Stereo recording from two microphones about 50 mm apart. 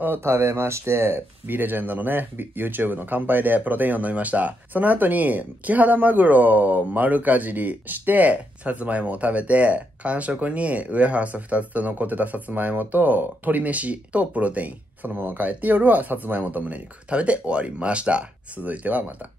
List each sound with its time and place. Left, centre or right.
0.0 s speech: right
1.5 s speech: right
15.1 s speech: right